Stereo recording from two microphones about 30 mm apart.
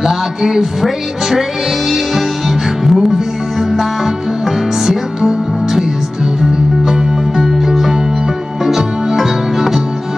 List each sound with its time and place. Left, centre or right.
0.0 s music: centre
2.8 s music: centre
7.4 s music: centre